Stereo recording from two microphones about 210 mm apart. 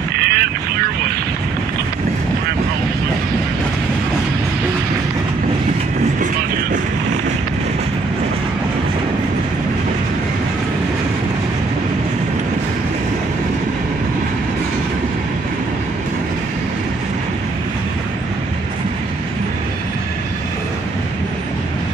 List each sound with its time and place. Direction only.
0.2 s vehicle: 50° right (ahead or behind)